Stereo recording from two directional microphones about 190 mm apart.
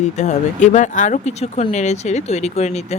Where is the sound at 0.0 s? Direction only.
40° left (ahead or behind).